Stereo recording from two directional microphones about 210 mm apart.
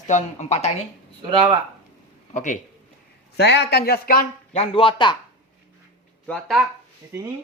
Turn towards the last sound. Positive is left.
turn(degrees=0)  # may be behind; listen again after turning